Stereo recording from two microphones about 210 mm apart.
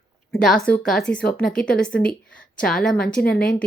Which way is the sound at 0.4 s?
5° left (ahead or behind).